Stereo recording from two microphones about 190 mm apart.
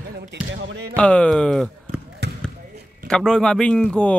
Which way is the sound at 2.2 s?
60° right (ahead or behind).